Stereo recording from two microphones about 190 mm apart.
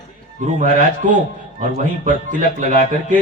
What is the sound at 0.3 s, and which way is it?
A man's voice, 40° right (ahead or behind).